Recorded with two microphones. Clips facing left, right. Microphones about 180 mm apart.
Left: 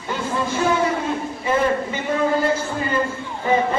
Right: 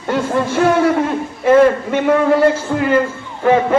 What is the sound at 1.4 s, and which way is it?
Speech, 70° right (ahead or behind).